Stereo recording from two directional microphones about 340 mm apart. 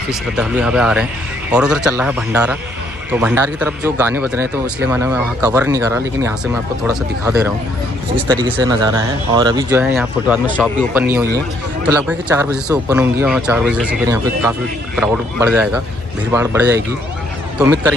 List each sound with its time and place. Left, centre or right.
0.1 s speech: centre